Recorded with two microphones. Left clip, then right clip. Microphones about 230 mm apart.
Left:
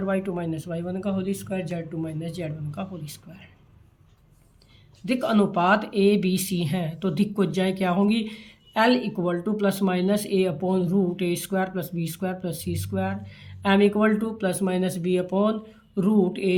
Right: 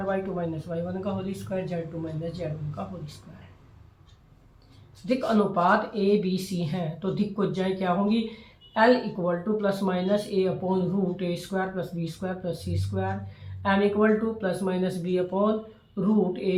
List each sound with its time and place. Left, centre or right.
0.1 s speech: left
5.0 s speech: left